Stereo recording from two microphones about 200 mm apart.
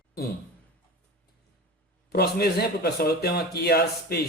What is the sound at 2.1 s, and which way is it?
Speech, 55° left (ahead or behind).